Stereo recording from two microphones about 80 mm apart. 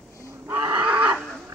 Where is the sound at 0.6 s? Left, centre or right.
Right.